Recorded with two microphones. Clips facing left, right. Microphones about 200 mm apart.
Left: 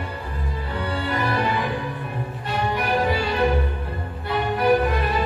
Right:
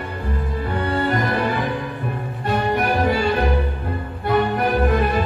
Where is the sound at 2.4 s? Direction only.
50° right (ahead or behind).